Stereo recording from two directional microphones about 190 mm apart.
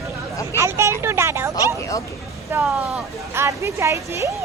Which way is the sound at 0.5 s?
15° right (ahead or behind).